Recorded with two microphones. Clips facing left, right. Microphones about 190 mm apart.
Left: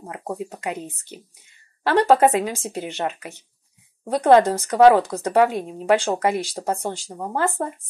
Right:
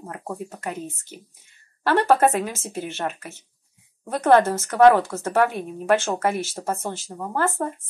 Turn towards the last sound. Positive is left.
turn(degrees=15)  # may be behind; listen again after turning